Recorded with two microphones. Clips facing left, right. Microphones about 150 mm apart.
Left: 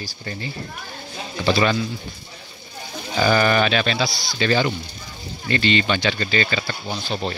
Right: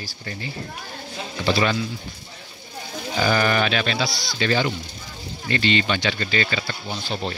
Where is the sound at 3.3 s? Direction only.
40° left (ahead or behind).